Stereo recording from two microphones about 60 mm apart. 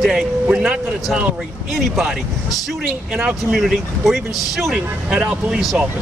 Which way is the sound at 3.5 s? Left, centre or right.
Centre.